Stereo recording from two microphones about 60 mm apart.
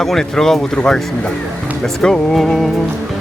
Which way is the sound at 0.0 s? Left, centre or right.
Centre.